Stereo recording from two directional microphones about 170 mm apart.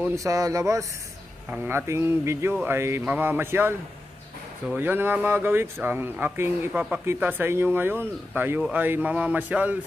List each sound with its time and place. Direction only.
0.0 s speech: 20° right (ahead or behind)